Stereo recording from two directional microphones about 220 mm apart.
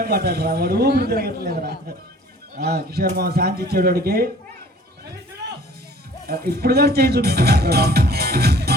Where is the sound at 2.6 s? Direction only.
45° right (ahead or behind).